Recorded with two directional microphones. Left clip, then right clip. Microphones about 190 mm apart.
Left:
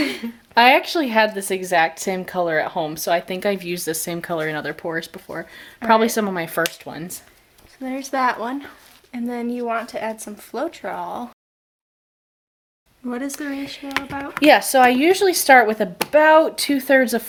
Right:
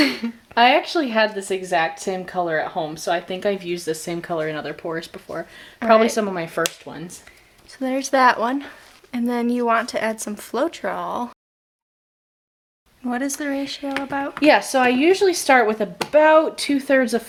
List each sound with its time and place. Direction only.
0.5 s speech: 45° left (ahead or behind)
6.8 s speech: 50° left (ahead or behind)
7.7 s speech: 40° right (ahead or behind)
13.1 s speech: 30° right (ahead or behind)
14.3 s speech: 35° left (ahead or behind)